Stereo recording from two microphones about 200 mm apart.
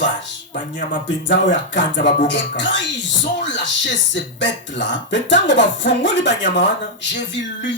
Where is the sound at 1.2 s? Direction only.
60° left (ahead or behind).